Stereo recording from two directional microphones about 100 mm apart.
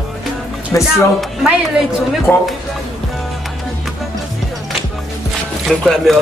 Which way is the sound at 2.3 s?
20° left (ahead or behind).